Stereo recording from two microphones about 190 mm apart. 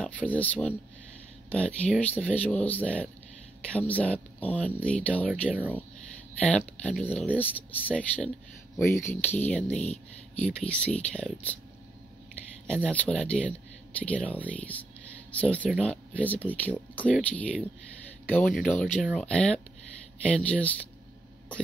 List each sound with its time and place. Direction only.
0.0 s speech: 10° left (ahead or behind)
5.5 s speech: 5° right (ahead or behind)
6.4 s speech: 5° left (ahead or behind)
9.8 s speech: 35° left (ahead or behind)
10.7 s speech: 5° left (ahead or behind)
12.8 s speech: 5° left (ahead or behind)